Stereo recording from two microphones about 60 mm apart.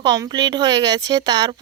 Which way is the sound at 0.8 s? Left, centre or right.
Right.